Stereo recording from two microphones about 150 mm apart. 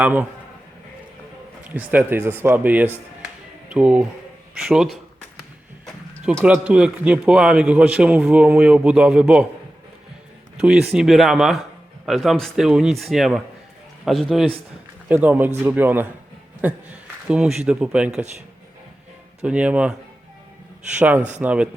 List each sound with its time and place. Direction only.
0.0 s a man's voice: 10° right (ahead or behind)
1.7 s a man's voice: 10° right (ahead or behind)
5.8 s a sound: 5° left (ahead or behind)
6.4 s a man's voice: 5° right (ahead or behind)
10.6 s a man's voice: 5° right (ahead or behind)
15.1 s a man's voice: 10° right (ahead or behind)
19.4 s a man's voice: 10° right (ahead or behind)
21.2 s speech: 50° right (ahead or behind)
21.4 s a man's voice: 10° right (ahead or behind)